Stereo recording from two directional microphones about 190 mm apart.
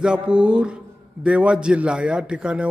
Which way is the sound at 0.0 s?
5° right (ahead or behind).